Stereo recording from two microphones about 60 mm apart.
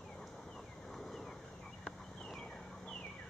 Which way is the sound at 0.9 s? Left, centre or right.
Centre.